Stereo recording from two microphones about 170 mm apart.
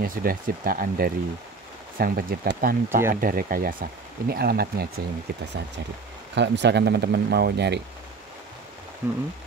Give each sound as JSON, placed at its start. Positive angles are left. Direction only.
{"t": 0.0, "sound": "speech", "side_deg": -55}
{"t": 6.3, "sound": "speech", "side_deg": -90}
{"t": 9.0, "sound": "speech", "side_deg": -10}